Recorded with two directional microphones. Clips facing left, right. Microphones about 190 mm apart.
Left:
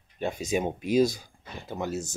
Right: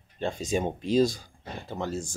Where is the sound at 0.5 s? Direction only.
10° left (ahead or behind).